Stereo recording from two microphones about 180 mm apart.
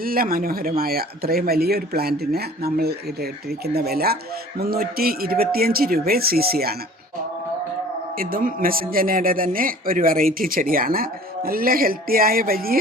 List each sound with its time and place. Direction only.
0.0 s speech: 55° right (ahead or behind)
8.2 s speech: 50° right (ahead or behind)